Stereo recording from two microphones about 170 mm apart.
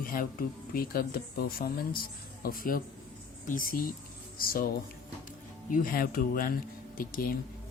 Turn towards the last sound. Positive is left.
turn(degrees=60)  # may be behind; listen again after turning